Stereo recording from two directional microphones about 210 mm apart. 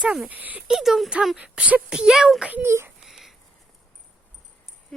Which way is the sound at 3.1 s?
Centre (ahead or behind).